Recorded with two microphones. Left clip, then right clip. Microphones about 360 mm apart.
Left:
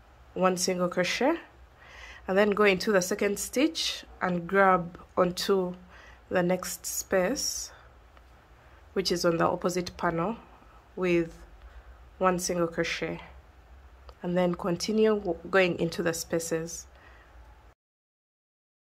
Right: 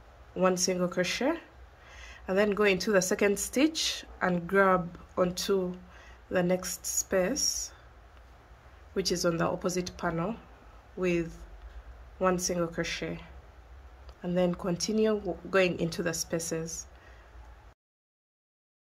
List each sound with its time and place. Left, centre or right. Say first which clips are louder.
0.4 s speech: left 1 dB; centre
8.9 s speech: left 3 dB; centre